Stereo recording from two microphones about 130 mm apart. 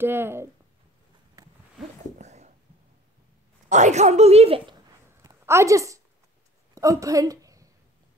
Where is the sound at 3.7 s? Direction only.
65° right (ahead or behind); by 4.7 s 50° right (ahead or behind).